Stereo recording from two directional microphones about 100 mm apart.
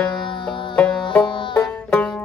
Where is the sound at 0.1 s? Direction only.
55° left (ahead or behind).